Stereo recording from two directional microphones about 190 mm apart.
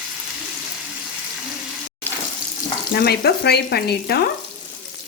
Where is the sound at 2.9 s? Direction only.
55° left (ahead or behind).